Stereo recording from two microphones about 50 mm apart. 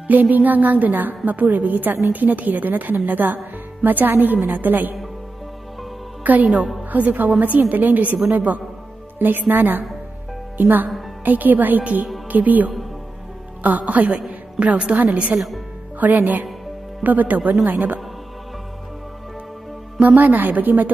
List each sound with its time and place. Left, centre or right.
0.1 s a woman's voice: right
6.2 s a woman's voice: right
15.3 s a woman's voice: centre
16.0 s a woman's voice: right
20.0 s a woman's voice: right